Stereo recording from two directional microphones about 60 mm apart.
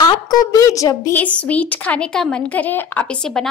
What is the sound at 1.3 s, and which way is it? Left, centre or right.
Speech, left.